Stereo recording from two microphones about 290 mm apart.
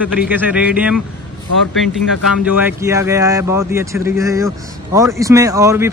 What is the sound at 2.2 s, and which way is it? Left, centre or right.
A man's voice, centre.